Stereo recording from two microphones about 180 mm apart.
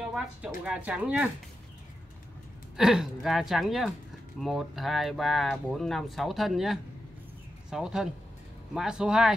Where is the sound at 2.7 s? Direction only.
Centre (ahead or behind).